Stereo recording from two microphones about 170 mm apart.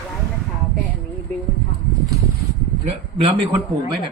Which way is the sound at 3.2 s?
30° right (ahead or behind).